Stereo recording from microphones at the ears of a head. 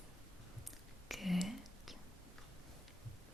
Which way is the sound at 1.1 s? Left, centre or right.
Centre.